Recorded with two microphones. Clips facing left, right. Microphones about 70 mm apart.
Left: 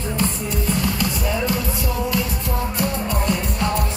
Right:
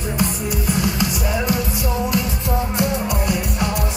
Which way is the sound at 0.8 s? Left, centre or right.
Centre.